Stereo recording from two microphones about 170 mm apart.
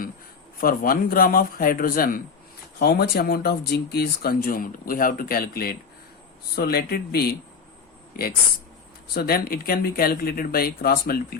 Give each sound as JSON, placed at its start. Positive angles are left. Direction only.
{"t": 0.6, "sound": "speech", "side_deg": 55}
{"t": 9.1, "sound": "speech", "side_deg": 65}